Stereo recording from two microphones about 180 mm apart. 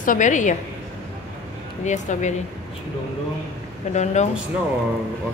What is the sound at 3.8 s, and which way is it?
Speech, 40° left (ahead or behind).